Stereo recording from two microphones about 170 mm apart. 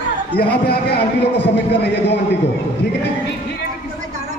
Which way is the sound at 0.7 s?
70° left (ahead or behind).